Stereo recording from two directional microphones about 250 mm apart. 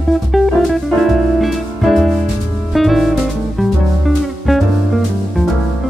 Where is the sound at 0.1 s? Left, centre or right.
Centre.